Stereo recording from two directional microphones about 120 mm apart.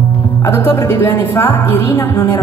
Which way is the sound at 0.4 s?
20° left (ahead or behind).